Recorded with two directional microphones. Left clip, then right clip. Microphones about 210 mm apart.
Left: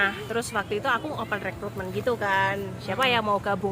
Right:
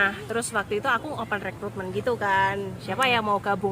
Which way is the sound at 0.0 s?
15° right (ahead or behind).